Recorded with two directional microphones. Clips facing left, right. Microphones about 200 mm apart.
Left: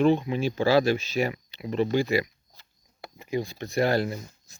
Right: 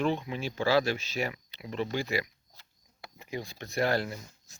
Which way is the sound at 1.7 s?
40° left (ahead or behind).